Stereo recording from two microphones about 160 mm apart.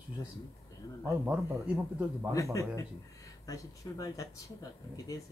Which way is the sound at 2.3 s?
20° left (ahead or behind).